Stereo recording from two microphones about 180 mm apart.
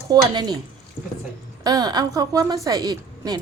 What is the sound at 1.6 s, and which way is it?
Speech, 20° right (ahead or behind).